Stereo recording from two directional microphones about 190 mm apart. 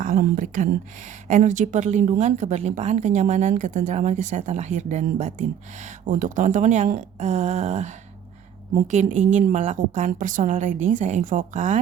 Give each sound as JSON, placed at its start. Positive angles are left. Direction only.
{"t": 0.0, "sound": "a woman's voice", "side_deg": -45}